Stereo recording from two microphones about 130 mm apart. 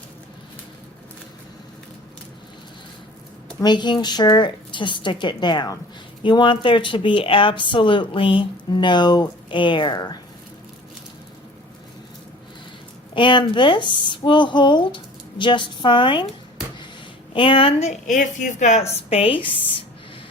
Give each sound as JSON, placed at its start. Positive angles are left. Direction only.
{"t": 3.6, "sound": "speech", "side_deg": 35}
{"t": 13.1, "sound": "speech", "side_deg": 40}
{"t": 17.3, "sound": "speech", "side_deg": 40}
{"t": 18.0, "sound": "speech", "side_deg": 75}